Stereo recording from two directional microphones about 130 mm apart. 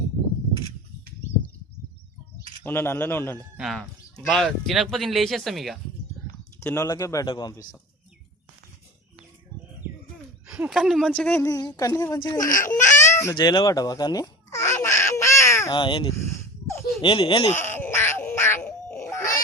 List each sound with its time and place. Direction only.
2.6 s a man's voice: 20° left (ahead or behind)
3.6 s speech: centre (ahead or behind)
6.6 s speech: 20° left (ahead or behind)
10.4 s speech: 5° right (ahead or behind)
11.3 s speech: 20° left (ahead or behind)
12.4 s speech: 90° left
12.9 s baby cry: 20° left (ahead or behind)
13.3 s a sound: 35° left (ahead or behind)
15.7 s speech: 40° left (ahead or behind)
16.3 s a sound: 20° left (ahead or behind)
17.0 s speech: 40° left (ahead or behind)
17.5 s music: 15° left (ahead or behind)